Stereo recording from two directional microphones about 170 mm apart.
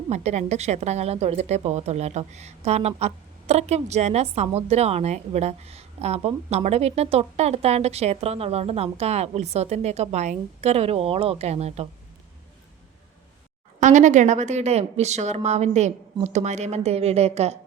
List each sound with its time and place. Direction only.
0.1 s a woman's voice: 40° right (ahead or behind)
13.7 s a woman's voice: 45° right (ahead or behind)